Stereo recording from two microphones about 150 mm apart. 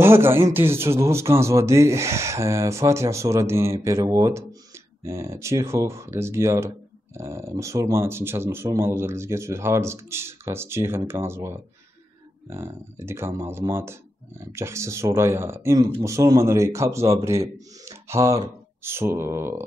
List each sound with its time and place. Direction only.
0.0 s speech: 15° right (ahead or behind)